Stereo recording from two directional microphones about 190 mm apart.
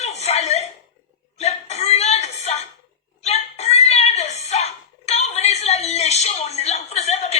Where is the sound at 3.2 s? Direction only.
35° left (ahead or behind).